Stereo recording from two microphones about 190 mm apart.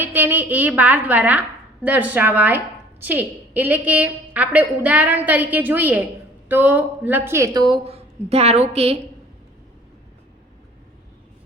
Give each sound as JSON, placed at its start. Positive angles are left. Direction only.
{"t": 0.0, "sound": "a woman's voice", "side_deg": -10}